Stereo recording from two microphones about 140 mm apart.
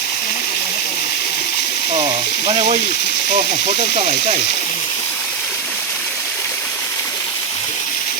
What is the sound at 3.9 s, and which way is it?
Speech, 50° right (ahead or behind).